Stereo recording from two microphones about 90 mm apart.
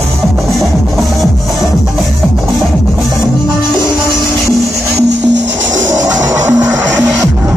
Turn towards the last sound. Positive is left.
turn(degrees=-40)  # may be behind; listen again after turning